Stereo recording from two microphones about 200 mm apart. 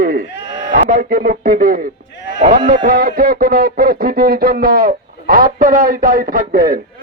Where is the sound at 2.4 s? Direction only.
40° right (ahead or behind).